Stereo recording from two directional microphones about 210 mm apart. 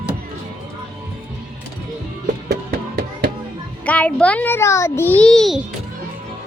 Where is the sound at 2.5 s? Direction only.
45° right (ahead or behind).